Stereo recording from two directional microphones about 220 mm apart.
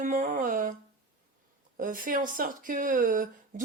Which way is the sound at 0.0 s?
35° right (ahead or behind).